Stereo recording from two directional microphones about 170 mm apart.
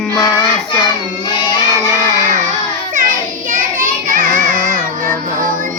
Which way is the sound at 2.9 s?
50° right (ahead or behind).